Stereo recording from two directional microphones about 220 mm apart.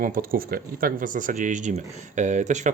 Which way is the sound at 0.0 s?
40° right (ahead or behind).